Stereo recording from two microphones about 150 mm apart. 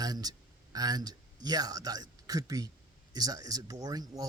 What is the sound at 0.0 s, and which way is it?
Speech, 25° right (ahead or behind).